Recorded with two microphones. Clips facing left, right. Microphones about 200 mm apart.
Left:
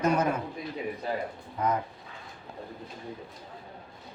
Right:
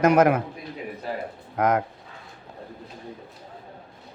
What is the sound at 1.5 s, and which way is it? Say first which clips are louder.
Speech: right 7 dB; 90° right.